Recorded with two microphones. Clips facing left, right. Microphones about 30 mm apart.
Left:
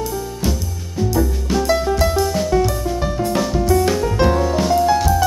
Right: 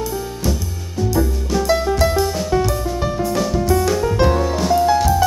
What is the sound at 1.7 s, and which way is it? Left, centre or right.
Music, centre.